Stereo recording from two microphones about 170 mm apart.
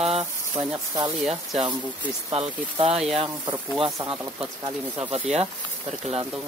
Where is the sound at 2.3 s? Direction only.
35° right (ahead or behind).